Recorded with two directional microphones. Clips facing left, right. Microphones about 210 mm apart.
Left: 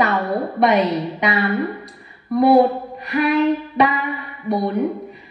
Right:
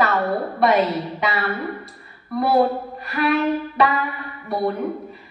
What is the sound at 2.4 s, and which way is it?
Speech, 20° left (ahead or behind).